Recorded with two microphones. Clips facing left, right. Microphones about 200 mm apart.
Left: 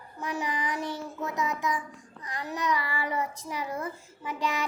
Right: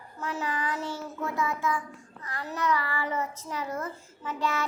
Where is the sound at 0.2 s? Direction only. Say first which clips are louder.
Even; 15° left (ahead or behind).